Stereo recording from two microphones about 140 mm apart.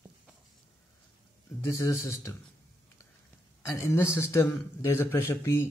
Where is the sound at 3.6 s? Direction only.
20° left (ahead or behind).